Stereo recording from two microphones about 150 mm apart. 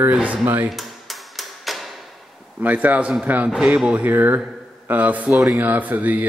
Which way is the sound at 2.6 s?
10° right (ahead or behind).